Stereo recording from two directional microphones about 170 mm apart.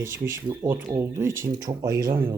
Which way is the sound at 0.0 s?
15° right (ahead or behind).